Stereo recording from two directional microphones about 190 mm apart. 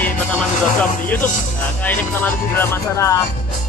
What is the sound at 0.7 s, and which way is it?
Speech, 10° left (ahead or behind).